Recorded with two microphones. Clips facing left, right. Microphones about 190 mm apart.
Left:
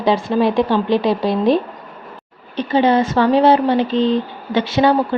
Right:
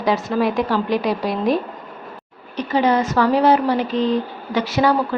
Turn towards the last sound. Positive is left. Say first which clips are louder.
# left 3 dB
turn(degrees=25)  # may be behind; listen again after turning